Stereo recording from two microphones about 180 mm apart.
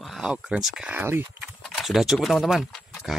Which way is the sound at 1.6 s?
Centre (ahead or behind).